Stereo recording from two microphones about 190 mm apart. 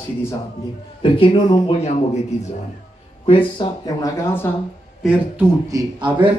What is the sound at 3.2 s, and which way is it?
Speech, 30° left (ahead or behind).